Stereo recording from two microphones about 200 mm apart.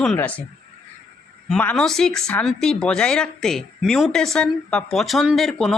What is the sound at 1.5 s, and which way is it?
A woman's voice, 5° left (ahead or behind).